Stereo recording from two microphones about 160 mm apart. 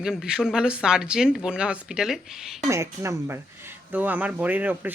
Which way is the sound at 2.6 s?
20° right (ahead or behind).